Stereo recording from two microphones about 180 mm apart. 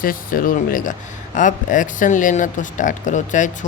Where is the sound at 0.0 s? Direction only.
50° left (ahead or behind).